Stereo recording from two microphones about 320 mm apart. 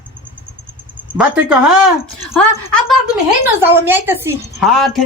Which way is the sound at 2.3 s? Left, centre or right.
Centre.